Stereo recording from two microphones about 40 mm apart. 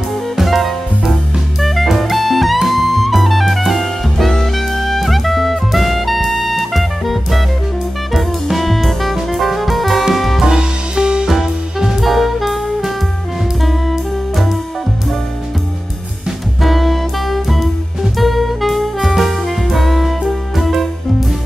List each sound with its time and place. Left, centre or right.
0.4 s music: centre
10.4 s music: centre
11.2 s music: centre
16.6 s music: centre
18.1 s saxophone: centre